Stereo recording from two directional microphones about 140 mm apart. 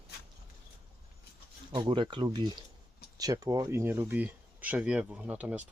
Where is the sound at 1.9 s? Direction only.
35° right (ahead or behind).